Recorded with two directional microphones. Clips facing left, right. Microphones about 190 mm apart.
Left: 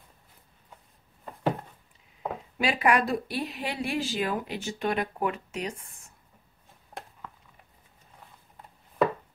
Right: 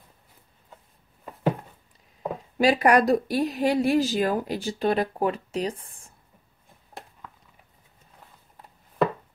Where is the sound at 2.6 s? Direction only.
40° right (ahead or behind).